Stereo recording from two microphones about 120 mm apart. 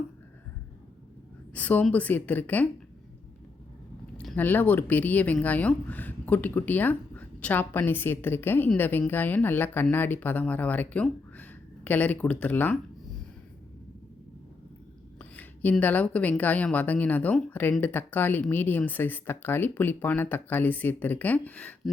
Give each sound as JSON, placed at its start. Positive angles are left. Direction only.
{"t": 1.5, "sound": "speech", "side_deg": 15}
{"t": 4.4, "sound": "speech", "side_deg": 15}
{"t": 15.2, "sound": "a sound", "side_deg": 15}
{"t": 15.8, "sound": "speech", "side_deg": 15}